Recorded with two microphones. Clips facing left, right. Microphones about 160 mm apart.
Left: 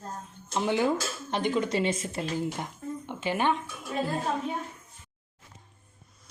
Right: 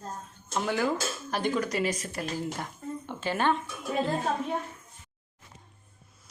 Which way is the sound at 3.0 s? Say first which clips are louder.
Even; 15° left (ahead or behind).